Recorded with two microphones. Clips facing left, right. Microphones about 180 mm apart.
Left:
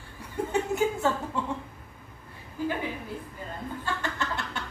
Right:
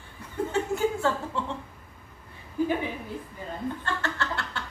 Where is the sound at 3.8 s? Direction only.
15° left (ahead or behind).